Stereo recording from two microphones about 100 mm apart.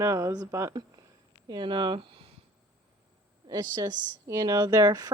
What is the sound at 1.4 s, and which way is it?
Speech, 55° right (ahead or behind).